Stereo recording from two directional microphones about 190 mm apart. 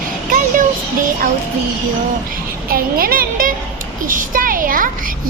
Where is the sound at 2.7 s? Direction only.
50° right (ahead or behind).